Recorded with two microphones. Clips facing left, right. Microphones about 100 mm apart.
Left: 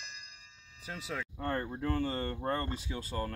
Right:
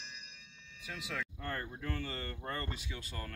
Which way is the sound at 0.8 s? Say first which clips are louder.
Left 2 dB; 30° left (ahead or behind).